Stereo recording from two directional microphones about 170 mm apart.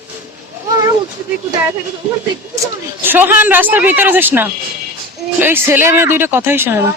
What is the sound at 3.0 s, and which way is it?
Speech, 10° right (ahead or behind).